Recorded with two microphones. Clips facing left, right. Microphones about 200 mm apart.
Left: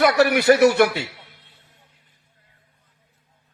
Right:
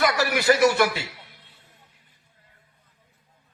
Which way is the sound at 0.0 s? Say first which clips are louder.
Left 6 dB; 65° left (ahead or behind).